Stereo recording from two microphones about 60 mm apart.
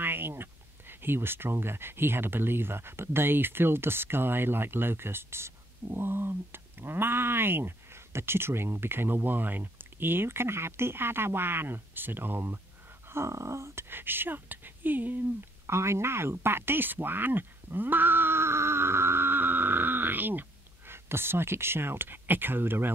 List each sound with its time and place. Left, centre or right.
0.0 s speech: right
13.1 s a sound: right
13.8 s speech: right
15.6 s speech: right